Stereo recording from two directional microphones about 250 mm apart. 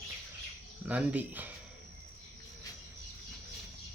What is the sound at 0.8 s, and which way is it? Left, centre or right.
Speech, centre.